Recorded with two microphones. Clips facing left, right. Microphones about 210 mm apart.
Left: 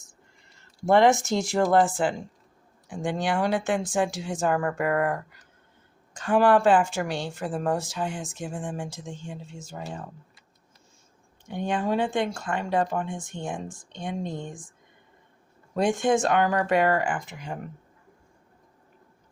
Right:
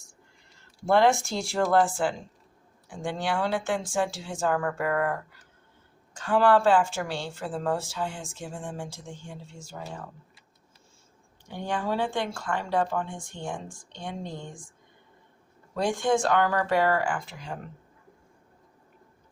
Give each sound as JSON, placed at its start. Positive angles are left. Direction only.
{"t": 0.9, "sound": "a woman's voice", "side_deg": 20}
{"t": 11.4, "sound": "speech", "side_deg": 20}
{"t": 15.7, "sound": "speech", "side_deg": 20}